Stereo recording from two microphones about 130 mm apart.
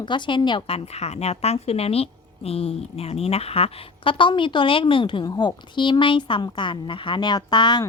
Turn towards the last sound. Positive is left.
turn(degrees=35)  # may be behind; listen again after turning